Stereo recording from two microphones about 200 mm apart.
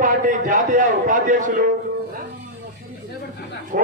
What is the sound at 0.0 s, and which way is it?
A man's voice, 40° right (ahead or behind).